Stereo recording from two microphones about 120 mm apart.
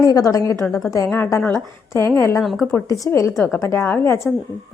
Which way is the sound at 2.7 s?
25° left (ahead or behind).